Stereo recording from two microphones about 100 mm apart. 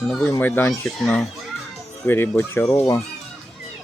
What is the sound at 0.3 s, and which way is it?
Speech, 20° left (ahead or behind).